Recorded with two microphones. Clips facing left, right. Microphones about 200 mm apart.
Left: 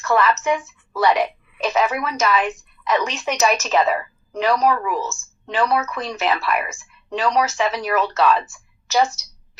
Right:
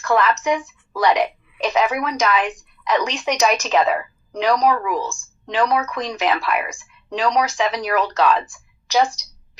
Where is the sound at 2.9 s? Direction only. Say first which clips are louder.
Right 1 dB; 15° right (ahead or behind).